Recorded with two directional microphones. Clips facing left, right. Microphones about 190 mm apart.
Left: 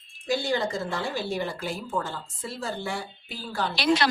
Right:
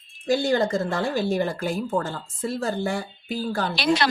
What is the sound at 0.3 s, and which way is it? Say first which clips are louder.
A woman's voice: right 5 dB; 45° right (ahead or behind).